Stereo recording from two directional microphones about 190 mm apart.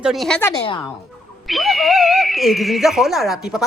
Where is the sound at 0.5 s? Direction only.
25° left (ahead or behind).